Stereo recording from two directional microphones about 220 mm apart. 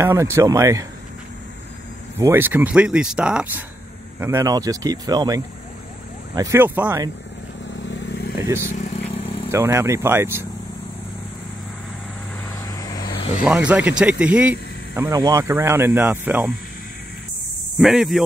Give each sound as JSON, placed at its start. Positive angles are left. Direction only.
{"t": 0.0, "sound": "speech", "side_deg": -15}
{"t": 2.1, "sound": "speech", "side_deg": -10}
{"t": 7.8, "sound": "vehicle", "side_deg": 55}
{"t": 8.4, "sound": "speech", "side_deg": -15}
{"t": 8.7, "sound": "vehicle", "side_deg": 30}
{"t": 9.5, "sound": "speech", "side_deg": -10}
{"t": 12.5, "sound": "vehicle", "side_deg": 15}
{"t": 13.4, "sound": "speech", "side_deg": -5}
{"t": 17.7, "sound": "speech", "side_deg": 0}